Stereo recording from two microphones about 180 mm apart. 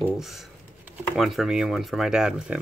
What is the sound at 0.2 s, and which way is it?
Speech, centre (ahead or behind).